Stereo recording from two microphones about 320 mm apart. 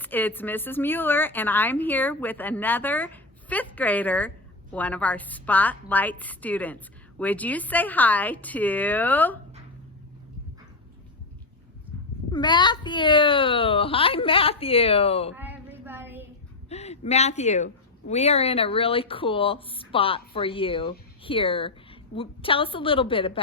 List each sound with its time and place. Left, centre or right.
0.0 s a woman's voice: centre
12.3 s a child's voice: centre
15.4 s a sound: centre
16.6 s a woman's voice: centre